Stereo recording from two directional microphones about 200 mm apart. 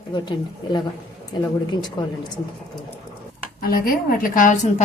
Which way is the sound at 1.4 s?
20° left (ahead or behind).